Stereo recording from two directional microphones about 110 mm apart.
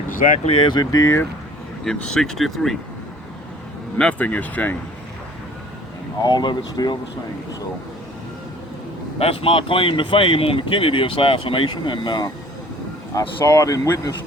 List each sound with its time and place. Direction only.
0.4 s speech: 55° left (ahead or behind)
0.8 s speech: 30° left (ahead or behind)
1.8 s speech: 5° left (ahead or behind)
3.9 s speech: 10° left (ahead or behind)
6.2 s speech: 40° left (ahead or behind)
9.1 s speech: 60° left (ahead or behind); by 12.3 s 45° left (ahead or behind)
13.1 s speech: 30° left (ahead or behind)